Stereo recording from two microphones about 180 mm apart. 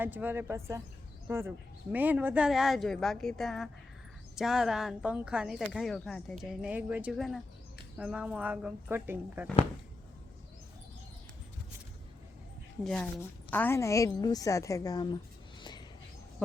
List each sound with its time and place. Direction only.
0.0 s speech: 10° right (ahead or behind)
12.8 s a woman's voice: 5° left (ahead or behind)